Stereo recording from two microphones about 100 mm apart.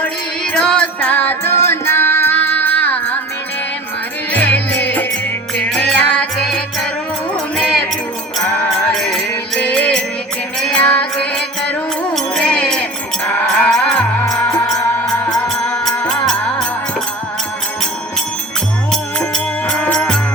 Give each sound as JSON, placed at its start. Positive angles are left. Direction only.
{"t": 0.5, "sound": "music", "side_deg": 10}
{"t": 4.3, "sound": "music", "side_deg": 15}
{"t": 8.9, "sound": "music", "side_deg": 5}
{"t": 16.0, "sound": "music", "side_deg": 10}
{"t": 18.9, "sound": "music", "side_deg": 5}